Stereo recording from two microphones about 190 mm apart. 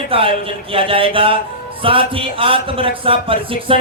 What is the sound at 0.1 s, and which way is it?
Speech, 30° right (ahead or behind).